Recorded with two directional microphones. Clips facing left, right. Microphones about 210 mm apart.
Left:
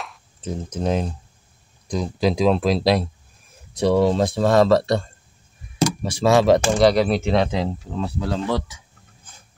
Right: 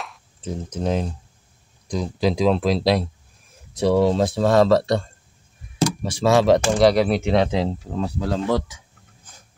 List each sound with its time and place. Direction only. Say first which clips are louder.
0.7 s speech: left 1 dB; 15° left (ahead or behind); by 5.0 s centre (ahead or behind)
5.8 s speech: left 1 dB; 15° left (ahead or behind)
6.8 s speech: even; 5° right (ahead or behind)
8.0 s speech: right 1 dB; 45° right (ahead or behind)